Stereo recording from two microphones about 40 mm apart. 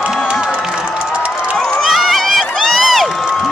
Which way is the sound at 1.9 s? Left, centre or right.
Centre.